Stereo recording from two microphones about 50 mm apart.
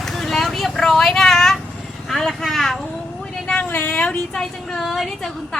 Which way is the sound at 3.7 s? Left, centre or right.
Left.